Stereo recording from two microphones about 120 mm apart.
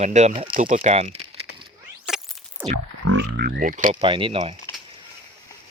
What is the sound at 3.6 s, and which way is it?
Speech, 90° right.